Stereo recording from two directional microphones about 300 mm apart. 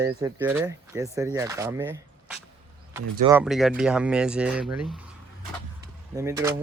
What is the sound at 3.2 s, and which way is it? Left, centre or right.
Speech, centre.